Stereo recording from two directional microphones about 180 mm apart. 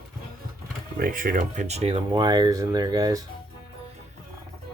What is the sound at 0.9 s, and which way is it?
Speech, 50° right (ahead or behind).